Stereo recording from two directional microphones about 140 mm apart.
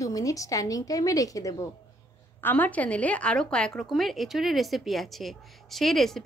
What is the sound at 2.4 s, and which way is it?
A woman's voice, 15° left (ahead or behind).